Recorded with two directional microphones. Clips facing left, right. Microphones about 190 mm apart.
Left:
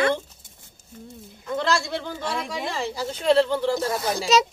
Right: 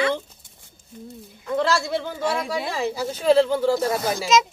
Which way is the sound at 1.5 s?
5° right (ahead or behind).